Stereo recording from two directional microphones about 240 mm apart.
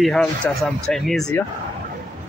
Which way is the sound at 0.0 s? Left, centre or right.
Centre.